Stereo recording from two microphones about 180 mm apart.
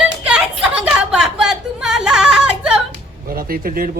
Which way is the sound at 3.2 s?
55° right (ahead or behind).